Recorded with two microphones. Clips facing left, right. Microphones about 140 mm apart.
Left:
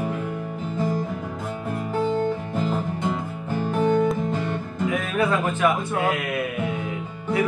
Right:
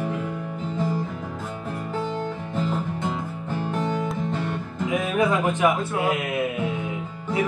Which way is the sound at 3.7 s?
10° left (ahead or behind).